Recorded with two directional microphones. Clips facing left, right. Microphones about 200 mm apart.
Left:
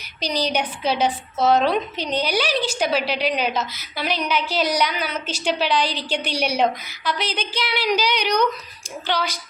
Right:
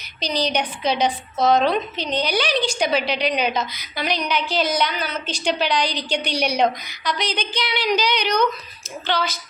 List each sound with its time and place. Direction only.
0.2 s a woman's voice: 10° left (ahead or behind)